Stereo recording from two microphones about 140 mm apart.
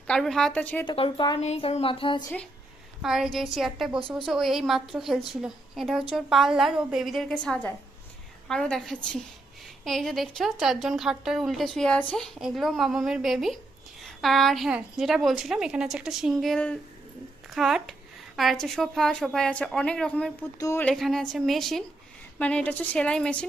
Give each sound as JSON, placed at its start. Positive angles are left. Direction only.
{"t": 0.1, "sound": "a woman's voice", "side_deg": 5}
{"t": 0.9, "sound": "a sound", "side_deg": 40}
{"t": 1.4, "sound": "a sound", "side_deg": 50}
{"t": 3.0, "sound": "a woman's voice", "side_deg": -5}
{"t": 20.6, "sound": "speech", "side_deg": 20}
{"t": 20.8, "sound": "a woman's voice", "side_deg": 0}